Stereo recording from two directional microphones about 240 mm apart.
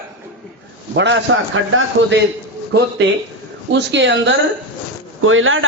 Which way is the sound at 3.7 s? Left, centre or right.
Right.